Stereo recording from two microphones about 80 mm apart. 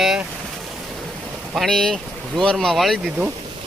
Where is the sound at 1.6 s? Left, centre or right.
Centre.